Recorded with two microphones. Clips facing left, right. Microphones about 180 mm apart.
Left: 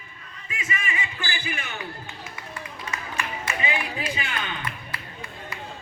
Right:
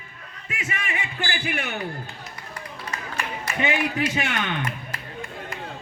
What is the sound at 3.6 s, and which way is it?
Speech, 75° right (ahead or behind).